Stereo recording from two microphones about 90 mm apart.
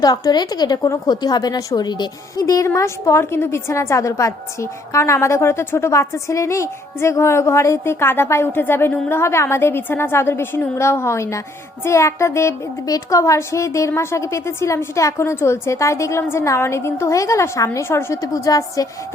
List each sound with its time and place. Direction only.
0.0 s a woman's voice: 50° left (ahead or behind)
2.3 s a woman's voice: 40° left (ahead or behind)